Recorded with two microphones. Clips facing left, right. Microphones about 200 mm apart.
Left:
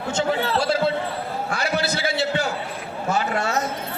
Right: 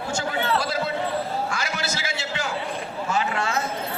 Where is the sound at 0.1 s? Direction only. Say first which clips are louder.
Left 3 dB; 30° left (ahead or behind).